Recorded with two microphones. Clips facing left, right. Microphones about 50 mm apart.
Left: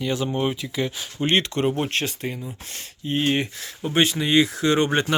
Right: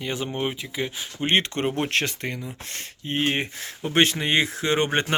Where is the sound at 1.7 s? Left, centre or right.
Right.